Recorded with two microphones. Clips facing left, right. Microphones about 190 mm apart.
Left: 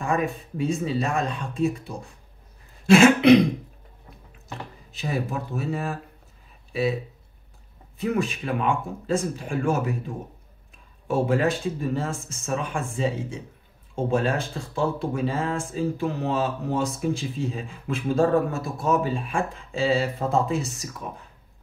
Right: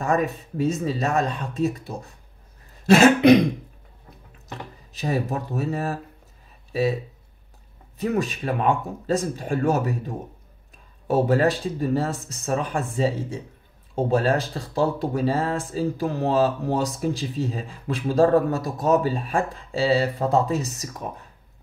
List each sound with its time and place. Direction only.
0.0 s speech: 40° right (ahead or behind)
4.9 s speech: 40° right (ahead or behind)
8.0 s speech: 40° right (ahead or behind)